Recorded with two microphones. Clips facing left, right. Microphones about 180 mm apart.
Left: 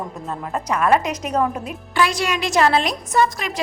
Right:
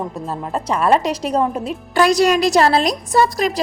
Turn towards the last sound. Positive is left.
turn(degrees=-35)  # may be behind; listen again after turning